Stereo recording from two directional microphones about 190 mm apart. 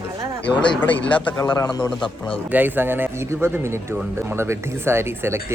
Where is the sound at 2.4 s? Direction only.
10° right (ahead or behind).